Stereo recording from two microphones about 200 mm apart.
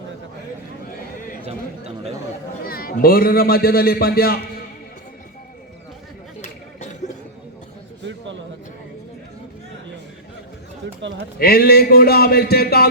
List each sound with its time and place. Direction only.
1.5 s speech: 30° right (ahead or behind)
2.6 s a man's voice: 50° left (ahead or behind)
8.0 s a sound: 65° right (ahead or behind)
11.3 s a man's voice: 50° left (ahead or behind)